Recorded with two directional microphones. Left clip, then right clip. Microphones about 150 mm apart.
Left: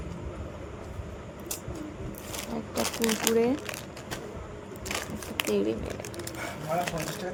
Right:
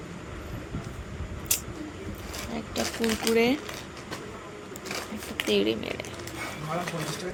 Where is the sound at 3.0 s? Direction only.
70° left (ahead or behind).